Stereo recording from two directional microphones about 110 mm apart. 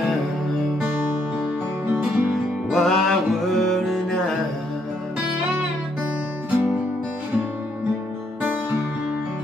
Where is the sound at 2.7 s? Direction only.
5° left (ahead or behind).